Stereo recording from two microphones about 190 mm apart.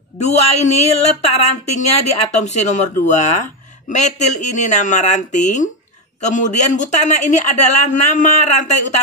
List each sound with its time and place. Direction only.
0.2 s speech: 35° left (ahead or behind)